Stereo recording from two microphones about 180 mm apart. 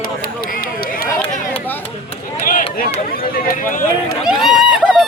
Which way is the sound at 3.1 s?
55° left (ahead or behind).